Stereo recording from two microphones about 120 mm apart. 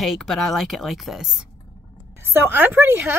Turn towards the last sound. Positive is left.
turn(degrees=-20)  # may be behind; listen again after turning